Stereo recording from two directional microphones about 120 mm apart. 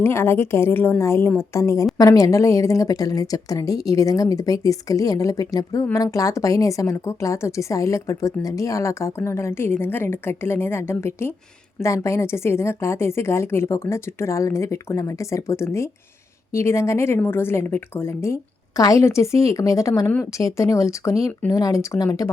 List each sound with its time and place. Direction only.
0.0 s speech: 20° left (ahead or behind)